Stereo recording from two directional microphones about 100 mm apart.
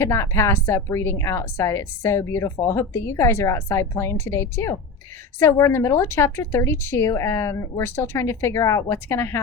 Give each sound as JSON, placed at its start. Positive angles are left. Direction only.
{"t": 0.0, "sound": "a woman's voice", "side_deg": 25}